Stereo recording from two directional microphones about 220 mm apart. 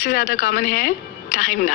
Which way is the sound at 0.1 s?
35° left (ahead or behind).